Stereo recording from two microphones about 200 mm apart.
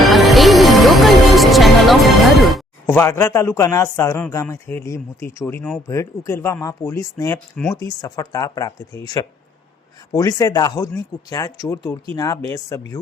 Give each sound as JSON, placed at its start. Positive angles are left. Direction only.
{"t": 0.0, "sound": "music", "side_deg": 0}
{"t": 3.0, "sound": "speech", "side_deg": 15}